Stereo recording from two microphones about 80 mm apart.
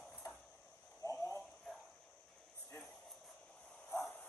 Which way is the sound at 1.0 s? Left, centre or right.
Left.